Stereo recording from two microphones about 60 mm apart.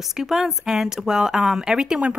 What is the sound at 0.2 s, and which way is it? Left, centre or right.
Speech, centre.